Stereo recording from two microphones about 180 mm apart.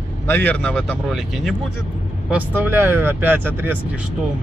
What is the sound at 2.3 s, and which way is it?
Speech, 10° right (ahead or behind).